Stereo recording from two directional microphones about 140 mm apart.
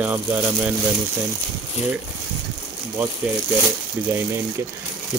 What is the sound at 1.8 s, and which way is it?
Speech, 55° left (ahead or behind).